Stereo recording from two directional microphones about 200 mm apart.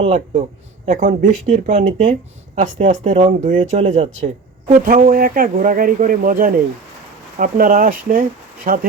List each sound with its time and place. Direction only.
0.0 s speech: 30° right (ahead or behind)